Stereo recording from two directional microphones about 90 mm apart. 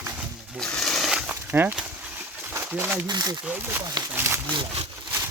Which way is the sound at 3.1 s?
50° right (ahead or behind).